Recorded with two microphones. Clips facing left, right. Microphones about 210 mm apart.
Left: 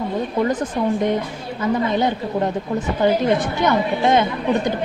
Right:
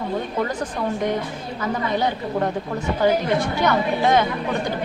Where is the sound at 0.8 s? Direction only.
20° left (ahead or behind).